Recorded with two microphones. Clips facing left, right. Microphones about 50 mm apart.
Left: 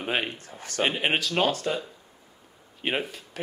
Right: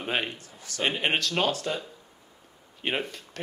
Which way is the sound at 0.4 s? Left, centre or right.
Left.